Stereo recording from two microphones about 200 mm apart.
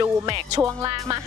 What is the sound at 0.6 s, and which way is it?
Music, 15° right (ahead or behind).